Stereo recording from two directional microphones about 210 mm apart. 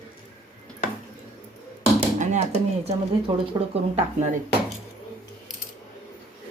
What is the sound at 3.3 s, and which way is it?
Speech, 25° right (ahead or behind).